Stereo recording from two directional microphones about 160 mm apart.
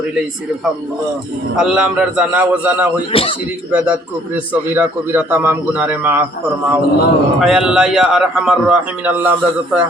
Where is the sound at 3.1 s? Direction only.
35° left (ahead or behind).